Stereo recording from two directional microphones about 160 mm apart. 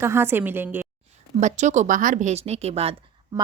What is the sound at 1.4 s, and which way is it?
Speech, 50° right (ahead or behind).